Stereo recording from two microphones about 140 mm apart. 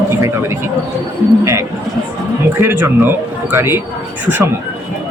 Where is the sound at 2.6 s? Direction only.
15° right (ahead or behind).